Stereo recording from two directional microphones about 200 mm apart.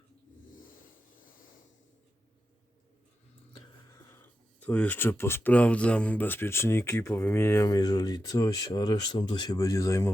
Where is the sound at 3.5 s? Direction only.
15° left (ahead or behind).